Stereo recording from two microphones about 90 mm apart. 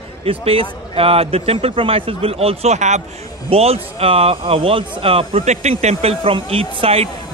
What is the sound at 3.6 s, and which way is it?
Speech, 90° right.